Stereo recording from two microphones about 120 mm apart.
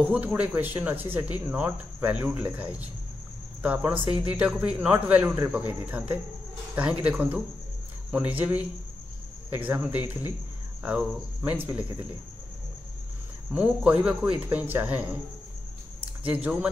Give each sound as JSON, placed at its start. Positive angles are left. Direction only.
{"t": 0.0, "sound": "speech", "side_deg": -15}
{"t": 13.5, "sound": "speech", "side_deg": -10}
{"t": 16.3, "sound": "speech", "side_deg": -10}